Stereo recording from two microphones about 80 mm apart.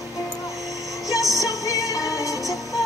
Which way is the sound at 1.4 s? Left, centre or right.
Left.